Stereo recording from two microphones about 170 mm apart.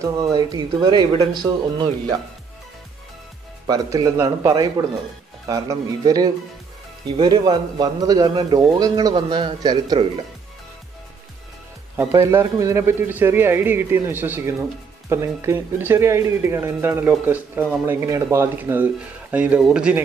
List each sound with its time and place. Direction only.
0.0 s speech: 20° right (ahead or behind)
3.6 s speech: 20° right (ahead or behind)
12.0 s a man's voice: 15° right (ahead or behind)